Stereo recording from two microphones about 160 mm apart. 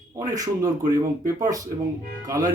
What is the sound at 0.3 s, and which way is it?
A man's voice, 20° right (ahead or behind).